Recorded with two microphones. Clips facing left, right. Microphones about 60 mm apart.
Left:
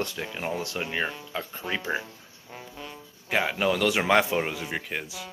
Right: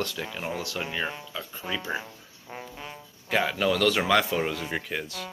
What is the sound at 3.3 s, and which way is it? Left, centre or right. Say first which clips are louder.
Speech: even; centre.